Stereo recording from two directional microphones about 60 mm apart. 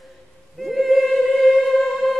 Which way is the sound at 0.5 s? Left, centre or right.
Centre.